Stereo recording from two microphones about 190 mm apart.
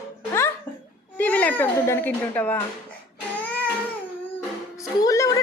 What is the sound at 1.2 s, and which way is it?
Speech, 10° left (ahead or behind).